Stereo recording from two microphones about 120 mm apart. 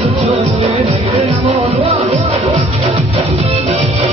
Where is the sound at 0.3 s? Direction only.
65° right (ahead or behind).